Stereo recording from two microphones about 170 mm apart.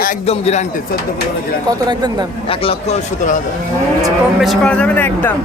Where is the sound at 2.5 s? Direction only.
35° left (ahead or behind).